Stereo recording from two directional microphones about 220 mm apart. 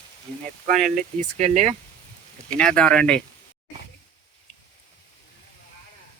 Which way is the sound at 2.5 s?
5° left (ahead or behind).